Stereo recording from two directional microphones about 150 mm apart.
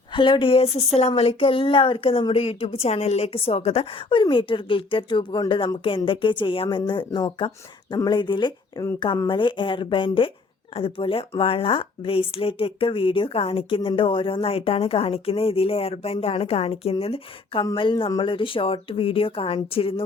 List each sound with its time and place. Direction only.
0.1 s speech: 35° left (ahead or behind)